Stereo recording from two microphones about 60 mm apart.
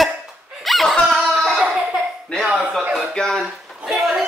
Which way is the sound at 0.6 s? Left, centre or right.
Centre.